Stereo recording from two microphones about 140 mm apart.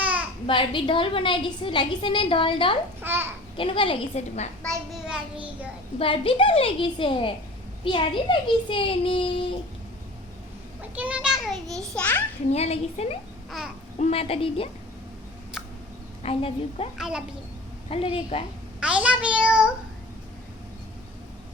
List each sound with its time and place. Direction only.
0.0 s a sound: 10° right (ahead or behind)
0.4 s a woman's voice: 35° left (ahead or behind)
3.0 s a child's voice: 15° right (ahead or behind)
3.6 s a woman's voice: 40° left (ahead or behind)
5.0 s a child's voice: 5° right (ahead or behind)
6.0 s a woman's voice: 40° left (ahead or behind)
10.9 s a child's voice: 10° right (ahead or behind); by 12.2 s 10° left (ahead or behind)
12.5 s a woman's voice: 50° left (ahead or behind)
15.6 s a sound: centre (ahead or behind)
16.2 s a woman's voice: 45° left (ahead or behind)
17.0 s a woman's voice: 5° right (ahead or behind)
17.8 s a woman's voice: 45° left (ahead or behind)
18.8 s a child's voice: 10° right (ahead or behind)